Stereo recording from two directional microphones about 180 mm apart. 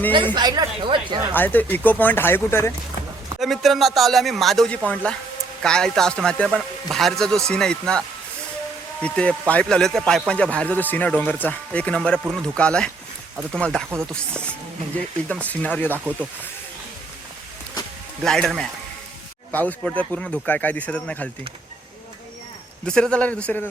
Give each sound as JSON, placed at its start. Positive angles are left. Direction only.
{"t": 0.3, "sound": "speech", "side_deg": -25}
{"t": 1.3, "sound": "a man's voice", "side_deg": 10}
{"t": 3.4, "sound": "a man's voice", "side_deg": 0}
{"t": 18.2, "sound": "a man's voice", "side_deg": 0}
{"t": 22.9, "sound": "a man's voice", "side_deg": 5}